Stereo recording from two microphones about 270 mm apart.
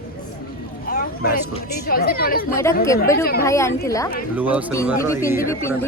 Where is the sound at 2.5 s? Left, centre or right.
Centre.